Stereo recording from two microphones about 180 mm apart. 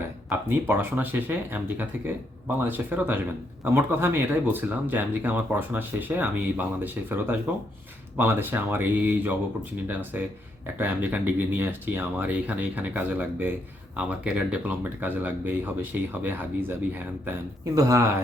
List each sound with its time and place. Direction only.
0.3 s speech: 10° right (ahead or behind)